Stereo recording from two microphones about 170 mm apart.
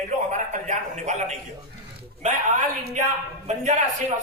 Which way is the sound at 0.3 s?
45° right (ahead or behind).